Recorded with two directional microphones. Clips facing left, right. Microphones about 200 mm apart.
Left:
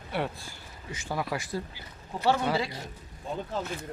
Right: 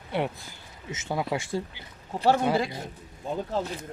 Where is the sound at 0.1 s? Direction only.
20° right (ahead or behind).